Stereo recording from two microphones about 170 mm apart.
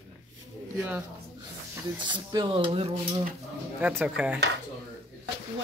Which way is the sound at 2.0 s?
25° right (ahead or behind).